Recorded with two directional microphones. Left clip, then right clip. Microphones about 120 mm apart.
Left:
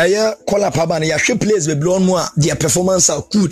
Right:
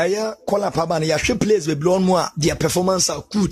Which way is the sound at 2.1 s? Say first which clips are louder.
Left 2 dB; 5° left (ahead or behind).